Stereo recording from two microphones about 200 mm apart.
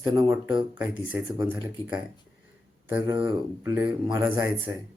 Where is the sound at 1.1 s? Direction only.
15° right (ahead or behind).